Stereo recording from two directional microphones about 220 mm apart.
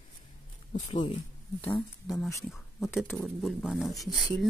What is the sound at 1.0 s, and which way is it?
Speech, 25° left (ahead or behind).